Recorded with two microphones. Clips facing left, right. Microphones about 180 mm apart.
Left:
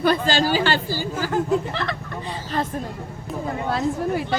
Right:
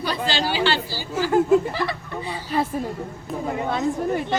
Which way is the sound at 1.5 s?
10° right (ahead or behind).